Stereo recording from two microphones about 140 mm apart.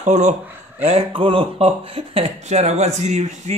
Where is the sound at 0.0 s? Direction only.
60° right (ahead or behind).